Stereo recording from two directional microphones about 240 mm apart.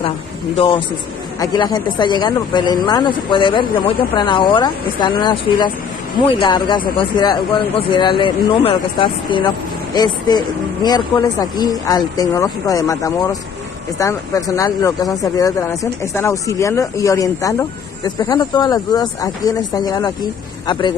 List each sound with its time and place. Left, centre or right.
0.6 s speech: left